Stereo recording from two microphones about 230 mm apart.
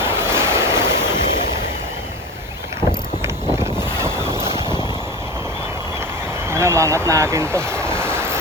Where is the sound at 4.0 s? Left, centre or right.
Centre.